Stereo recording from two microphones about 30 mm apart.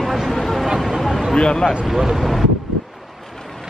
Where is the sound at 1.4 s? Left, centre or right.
Left.